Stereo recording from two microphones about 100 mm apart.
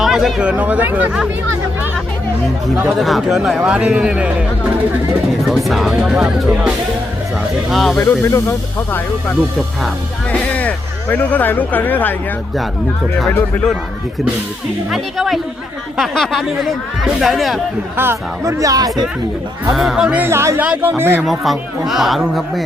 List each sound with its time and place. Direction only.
0.0 s speech: centre (ahead or behind)
2.9 s speech: centre (ahead or behind)
7.7 s speech: centre (ahead or behind)
7.9 s speech: 25° left (ahead or behind)
10.5 s speech: 15° left (ahead or behind)
14.8 s speech: centre (ahead or behind)
17.9 s speech: 25° right (ahead or behind)
18.6 s speech: 40° right (ahead or behind)
19.7 s speech: centre (ahead or behind)
20.2 s speech: 25° right (ahead or behind)
21.2 s speech: centre (ahead or behind)